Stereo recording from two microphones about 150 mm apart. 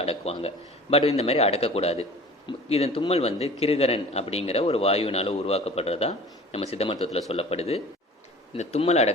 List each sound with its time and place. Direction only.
0.0 s a man's voice: 40° left (ahead or behind)